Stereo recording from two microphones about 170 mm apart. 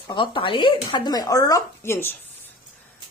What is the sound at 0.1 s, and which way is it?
Speech, 30° left (ahead or behind).